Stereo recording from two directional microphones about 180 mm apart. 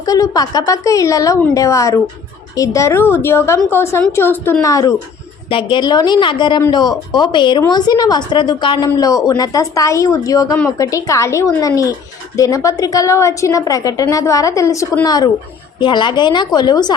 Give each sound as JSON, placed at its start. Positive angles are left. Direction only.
{"t": 0.0, "sound": "a woman's voice", "side_deg": 20}
{"t": 5.5, "sound": "a woman's voice", "side_deg": 30}